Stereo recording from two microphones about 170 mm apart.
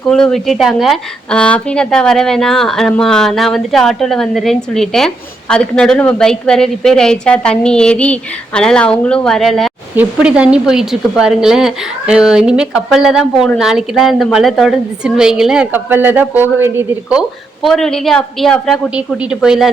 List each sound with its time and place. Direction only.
0.1 s a woman's voice: 5° left (ahead or behind)